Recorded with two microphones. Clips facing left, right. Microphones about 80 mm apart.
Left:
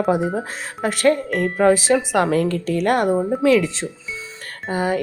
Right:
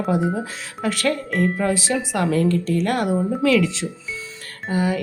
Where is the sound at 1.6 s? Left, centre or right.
Left.